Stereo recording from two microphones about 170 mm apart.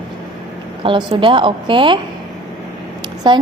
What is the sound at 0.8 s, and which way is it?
A woman's voice, 30° right (ahead or behind).